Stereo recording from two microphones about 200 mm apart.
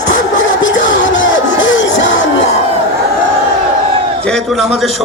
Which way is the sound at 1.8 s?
70° left (ahead or behind).